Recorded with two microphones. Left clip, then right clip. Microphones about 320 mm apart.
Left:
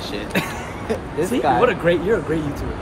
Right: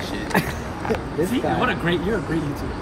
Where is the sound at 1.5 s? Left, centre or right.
Centre.